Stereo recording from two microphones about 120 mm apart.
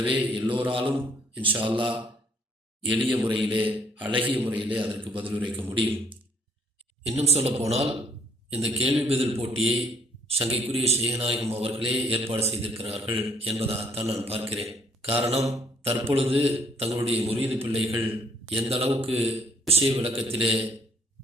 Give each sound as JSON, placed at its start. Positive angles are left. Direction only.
{"t": 0.0, "sound": "a man's voice", "side_deg": -45}
{"t": 3.7, "sound": "a man's voice", "side_deg": -15}
{"t": 4.1, "sound": "a man's voice", "side_deg": -45}
{"t": 4.4, "sound": "a man's voice", "side_deg": -15}
{"t": 4.6, "sound": "a man's voice", "side_deg": -45}
{"t": 7.0, "sound": "a man's voice", "side_deg": -60}
{"t": 17.4, "sound": "a man's voice", "side_deg": -20}
{"t": 18.7, "sound": "a man's voice", "side_deg": -55}